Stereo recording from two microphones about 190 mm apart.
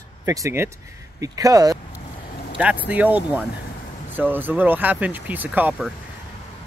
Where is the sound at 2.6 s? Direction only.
5° right (ahead or behind).